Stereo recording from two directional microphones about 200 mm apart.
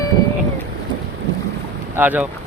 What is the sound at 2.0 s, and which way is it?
Speech, 10° right (ahead or behind).